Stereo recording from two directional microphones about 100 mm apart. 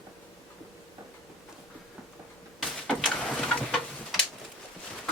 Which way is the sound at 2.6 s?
5° left (ahead or behind).